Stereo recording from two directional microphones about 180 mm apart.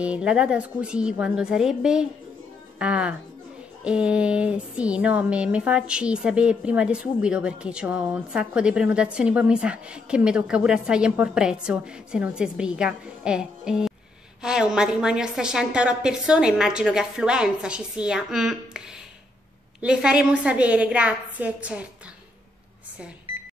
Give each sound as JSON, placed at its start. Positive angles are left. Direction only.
{"t": 0.0, "sound": "speech", "side_deg": -5}
{"t": 19.8, "sound": "a woman's voice", "side_deg": -5}
{"t": 23.3, "sound": "a sound", "side_deg": -30}